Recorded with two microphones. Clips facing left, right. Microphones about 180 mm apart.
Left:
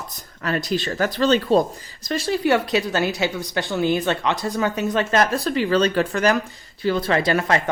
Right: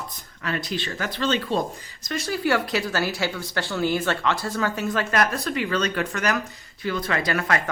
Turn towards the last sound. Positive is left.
turn(degrees=25)  # may be behind; listen again after turning